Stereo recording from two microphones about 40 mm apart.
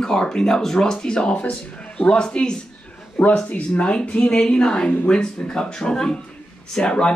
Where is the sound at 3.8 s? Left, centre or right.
Left.